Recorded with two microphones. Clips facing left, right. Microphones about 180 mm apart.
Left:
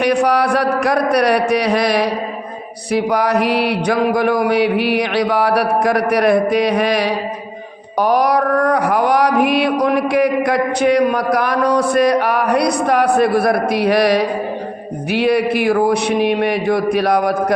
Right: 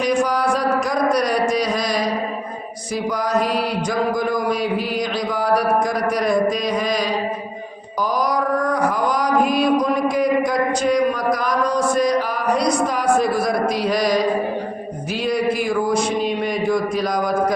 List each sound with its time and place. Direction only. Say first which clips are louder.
0.0 s music: left 4 dB; 65° left (ahead or behind)
2.9 s mantra: left 5 dB; 65° left (ahead or behind)
7.9 s music: left 6 dB; 65° left (ahead or behind)
15.1 s mantra: left 5 dB; 65° left (ahead or behind)